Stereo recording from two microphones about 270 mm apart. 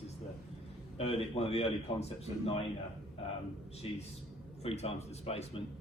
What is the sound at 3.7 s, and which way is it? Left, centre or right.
Speech, left.